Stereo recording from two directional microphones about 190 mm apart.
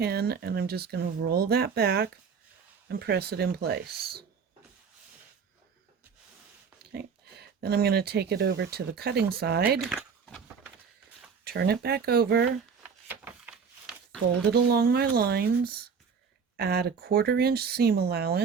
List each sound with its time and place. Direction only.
0.0 s speech: 55° right (ahead or behind)
6.9 s speech: 60° right (ahead or behind)
9.8 s keys jangling: centre (ahead or behind)
11.4 s speech: 55° right (ahead or behind)
13.1 s a sound: 5° right (ahead or behind)
14.5 s speech: 55° right (ahead or behind)